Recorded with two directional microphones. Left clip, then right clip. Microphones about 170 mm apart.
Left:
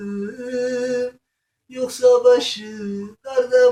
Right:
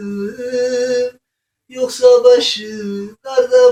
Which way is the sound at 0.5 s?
5° right (ahead or behind).